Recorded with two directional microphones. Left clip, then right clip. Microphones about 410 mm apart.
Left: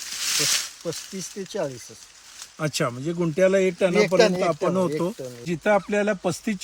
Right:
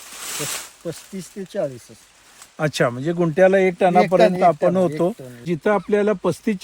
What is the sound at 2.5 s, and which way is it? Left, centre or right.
Speech, centre.